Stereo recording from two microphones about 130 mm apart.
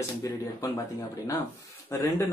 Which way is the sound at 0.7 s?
25° left (ahead or behind).